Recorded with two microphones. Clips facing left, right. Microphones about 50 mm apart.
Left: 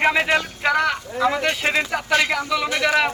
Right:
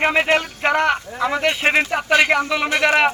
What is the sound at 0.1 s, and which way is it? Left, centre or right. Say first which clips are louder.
A man's voice: right 2 dB; right.